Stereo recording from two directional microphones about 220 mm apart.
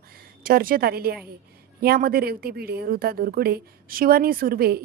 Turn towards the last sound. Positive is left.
turn(degrees=-45)  # may be behind; listen again after turning